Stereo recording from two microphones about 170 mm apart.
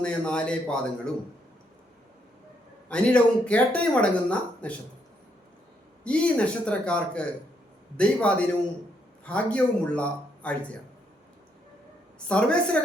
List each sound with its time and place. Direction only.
0.0 s a man's voice: 5° left (ahead or behind)
2.9 s speech: 5° left (ahead or behind)
6.1 s speech: 5° left (ahead or behind)
9.2 s a man's voice: 5° left (ahead or behind)
12.3 s a man's voice: 5° left (ahead or behind)